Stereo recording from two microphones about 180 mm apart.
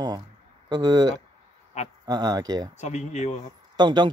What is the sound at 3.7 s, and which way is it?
Speech, 25° right (ahead or behind).